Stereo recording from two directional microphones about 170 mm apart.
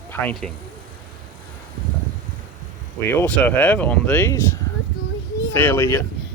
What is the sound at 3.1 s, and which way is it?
Speech, 10° left (ahead or behind).